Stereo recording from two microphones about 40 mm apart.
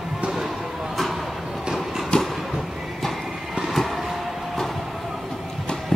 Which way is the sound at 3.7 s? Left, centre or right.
Centre.